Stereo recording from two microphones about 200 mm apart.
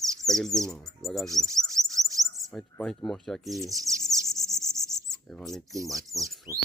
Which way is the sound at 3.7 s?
15° right (ahead or behind).